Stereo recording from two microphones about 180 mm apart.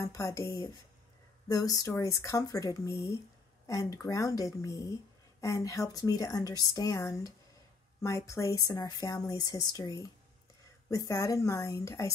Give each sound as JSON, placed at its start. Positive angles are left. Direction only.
{"t": 0.0, "sound": "speech", "side_deg": 15}